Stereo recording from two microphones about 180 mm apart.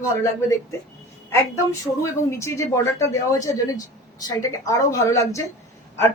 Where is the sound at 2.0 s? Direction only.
15° left (ahead or behind).